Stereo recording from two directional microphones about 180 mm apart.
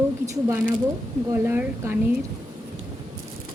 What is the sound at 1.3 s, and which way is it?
Speech, 15° right (ahead or behind).